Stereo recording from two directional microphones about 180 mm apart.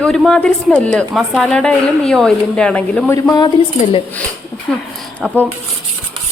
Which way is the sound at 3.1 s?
20° left (ahead or behind).